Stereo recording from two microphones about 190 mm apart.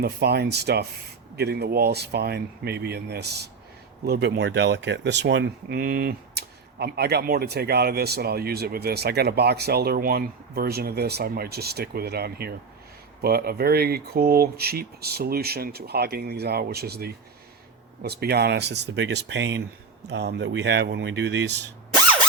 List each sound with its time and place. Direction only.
0.0 s speech: 55° right (ahead or behind)